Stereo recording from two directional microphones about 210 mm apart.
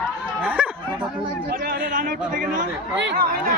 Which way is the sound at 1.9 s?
40° right (ahead or behind).